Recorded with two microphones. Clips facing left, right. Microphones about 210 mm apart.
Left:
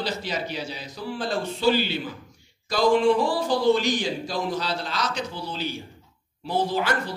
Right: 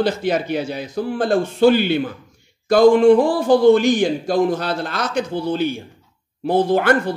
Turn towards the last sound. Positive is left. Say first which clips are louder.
# right 9 dB
turn(degrees=-55)  # may be behind; listen again after turning